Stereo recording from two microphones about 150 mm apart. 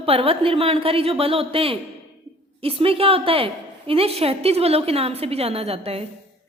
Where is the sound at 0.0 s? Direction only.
40° right (ahead or behind).